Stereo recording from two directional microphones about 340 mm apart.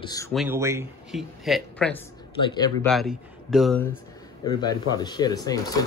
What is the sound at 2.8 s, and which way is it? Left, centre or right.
Speech, centre.